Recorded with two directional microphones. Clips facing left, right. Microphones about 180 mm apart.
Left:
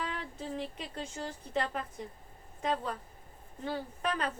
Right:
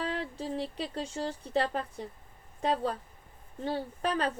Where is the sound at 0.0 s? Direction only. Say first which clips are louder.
Right 5 dB; 35° right (ahead or behind).